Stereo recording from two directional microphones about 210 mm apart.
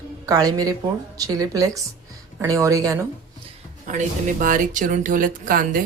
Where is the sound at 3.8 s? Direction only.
35° right (ahead or behind).